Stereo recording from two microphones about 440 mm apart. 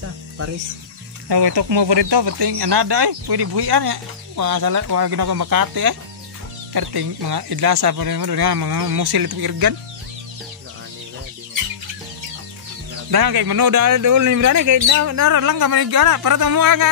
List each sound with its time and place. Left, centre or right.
1.3 s speech: right
13.1 s speech: right